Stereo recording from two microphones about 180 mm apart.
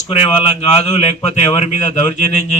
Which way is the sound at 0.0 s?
35° left (ahead or behind).